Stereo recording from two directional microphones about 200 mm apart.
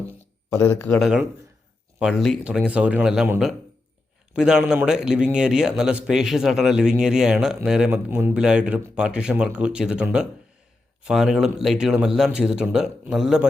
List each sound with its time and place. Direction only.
0.5 s speech: 10° left (ahead or behind)
0.9 s a man's voice: 5° right (ahead or behind)